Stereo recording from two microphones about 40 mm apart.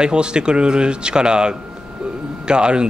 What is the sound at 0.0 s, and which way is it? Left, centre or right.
Speech, right.